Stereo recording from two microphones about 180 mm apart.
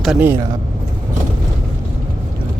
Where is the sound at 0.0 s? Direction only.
5° right (ahead or behind).